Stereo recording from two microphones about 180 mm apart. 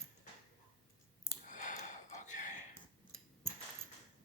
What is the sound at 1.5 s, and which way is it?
Gasp, 45° left (ahead or behind).